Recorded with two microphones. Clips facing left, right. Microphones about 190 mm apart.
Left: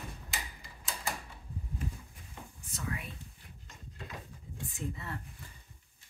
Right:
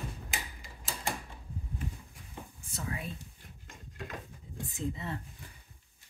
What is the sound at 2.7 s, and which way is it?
Whispering, 30° right (ahead or behind).